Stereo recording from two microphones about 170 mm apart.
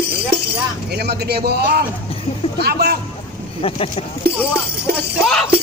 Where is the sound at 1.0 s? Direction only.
70° right (ahead or behind).